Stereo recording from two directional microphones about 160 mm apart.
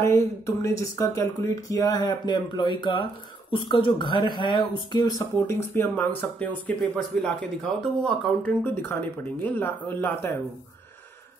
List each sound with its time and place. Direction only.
0.0 s speech: 15° left (ahead or behind)